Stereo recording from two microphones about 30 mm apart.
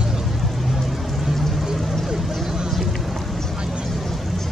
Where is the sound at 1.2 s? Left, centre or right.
Centre.